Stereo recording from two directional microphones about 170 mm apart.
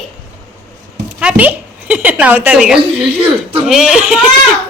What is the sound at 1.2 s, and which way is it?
A woman's voice, 10° right (ahead or behind).